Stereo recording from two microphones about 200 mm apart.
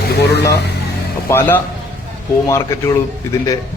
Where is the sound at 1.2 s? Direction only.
10° left (ahead or behind).